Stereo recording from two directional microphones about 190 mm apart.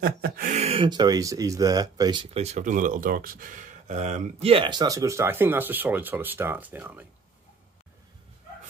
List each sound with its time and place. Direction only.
0.0 s speech: 50° right (ahead or behind)
0.6 s speech: 30° right (ahead or behind); by 7.1 s 10° right (ahead or behind)